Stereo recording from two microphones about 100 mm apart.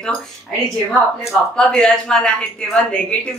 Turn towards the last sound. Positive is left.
turn(degrees=10)  # may be behind; listen again after turning